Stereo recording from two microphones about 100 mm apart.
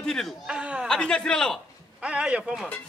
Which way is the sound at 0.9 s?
10° left (ahead or behind).